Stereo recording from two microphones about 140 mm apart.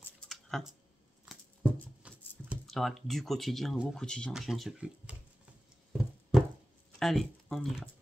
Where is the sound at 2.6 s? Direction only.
Centre (ahead or behind).